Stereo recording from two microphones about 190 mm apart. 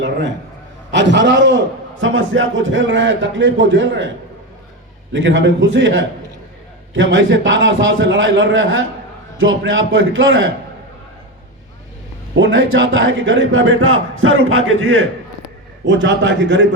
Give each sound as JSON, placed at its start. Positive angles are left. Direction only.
{"t": 0.9, "sound": "a man's voice", "side_deg": -70}
{"t": 5.1, "sound": "a man's voice", "side_deg": -85}
{"t": 12.8, "sound": "a man's voice", "side_deg": -90}
{"t": 15.9, "sound": "a man's voice", "side_deg": -75}